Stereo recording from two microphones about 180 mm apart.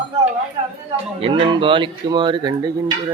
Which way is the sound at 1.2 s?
30° right (ahead or behind).